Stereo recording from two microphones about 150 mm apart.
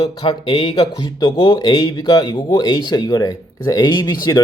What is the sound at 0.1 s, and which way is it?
Speech, 30° left (ahead or behind).